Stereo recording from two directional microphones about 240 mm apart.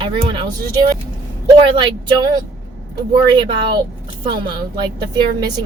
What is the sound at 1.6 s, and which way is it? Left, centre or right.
Speech, centre.